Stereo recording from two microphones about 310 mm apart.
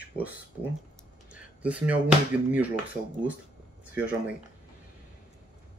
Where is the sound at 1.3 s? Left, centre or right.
Centre.